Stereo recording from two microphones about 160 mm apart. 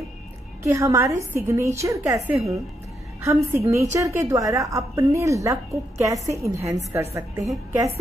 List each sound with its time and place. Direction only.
0.7 s a woman's voice: 15° right (ahead or behind)